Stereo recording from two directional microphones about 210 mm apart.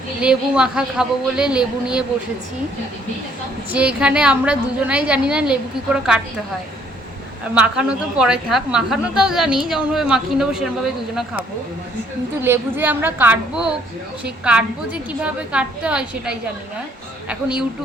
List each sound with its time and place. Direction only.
0.2 s a woman's voice: 5° right (ahead or behind)
3.7 s a woman's voice: 5° right (ahead or behind)
7.5 s a woman's voice: 5° right (ahead or behind)
12.4 s a woman's voice: 10° right (ahead or behind)
15.2 s a woman's voice: 5° right (ahead or behind)